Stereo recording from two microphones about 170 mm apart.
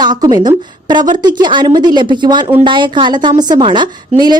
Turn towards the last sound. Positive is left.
turn(degrees=-25)  # may be behind; listen again after turning